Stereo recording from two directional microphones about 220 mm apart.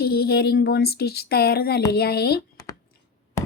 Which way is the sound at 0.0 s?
45° left (ahead or behind).